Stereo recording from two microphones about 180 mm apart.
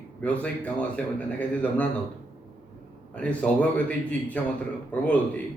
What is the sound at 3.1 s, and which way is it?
Speech, 5° left (ahead or behind).